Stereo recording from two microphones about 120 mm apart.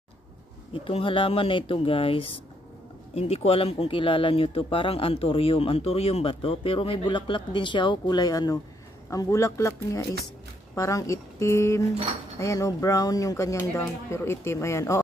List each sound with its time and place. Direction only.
0.7 s speech: 50° left (ahead or behind); by 15.0 s 25° left (ahead or behind)